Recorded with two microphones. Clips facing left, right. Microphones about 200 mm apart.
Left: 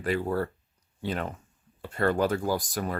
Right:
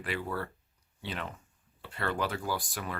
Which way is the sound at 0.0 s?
40° left (ahead or behind).